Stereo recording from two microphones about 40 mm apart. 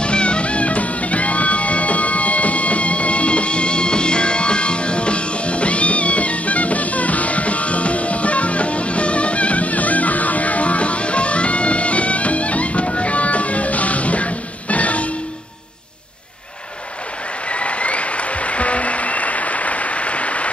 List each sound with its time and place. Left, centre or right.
0.0 s music: left
17.5 s music: left